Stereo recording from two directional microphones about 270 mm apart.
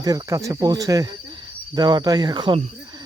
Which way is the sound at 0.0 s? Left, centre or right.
Centre.